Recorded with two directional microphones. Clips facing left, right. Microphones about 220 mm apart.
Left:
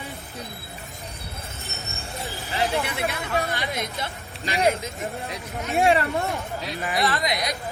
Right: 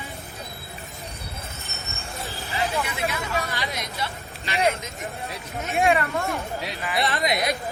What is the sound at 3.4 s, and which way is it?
Hubbub, 55° left (ahead or behind).